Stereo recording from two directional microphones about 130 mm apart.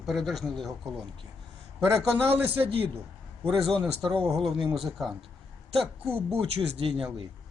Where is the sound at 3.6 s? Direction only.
Centre (ahead or behind).